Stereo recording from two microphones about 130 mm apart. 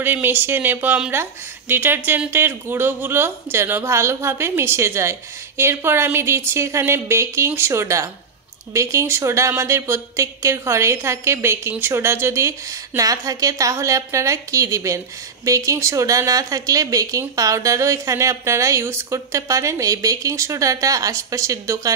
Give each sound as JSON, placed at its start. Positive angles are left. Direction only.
{"t": 0.0, "sound": "a woman's voice", "side_deg": -15}